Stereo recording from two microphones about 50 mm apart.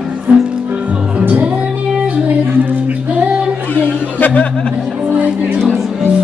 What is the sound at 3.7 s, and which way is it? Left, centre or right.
Chatter, left.